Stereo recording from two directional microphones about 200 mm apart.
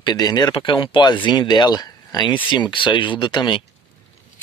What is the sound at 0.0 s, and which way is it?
Speech, 20° left (ahead or behind).